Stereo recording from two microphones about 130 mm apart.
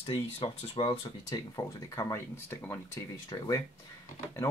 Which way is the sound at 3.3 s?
35° left (ahead or behind).